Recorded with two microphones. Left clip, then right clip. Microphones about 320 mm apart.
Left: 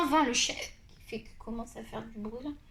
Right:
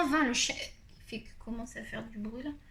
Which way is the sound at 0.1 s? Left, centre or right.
Centre.